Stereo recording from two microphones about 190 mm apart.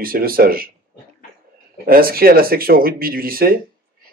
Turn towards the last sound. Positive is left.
turn(degrees=-50)  # may be behind; listen again after turning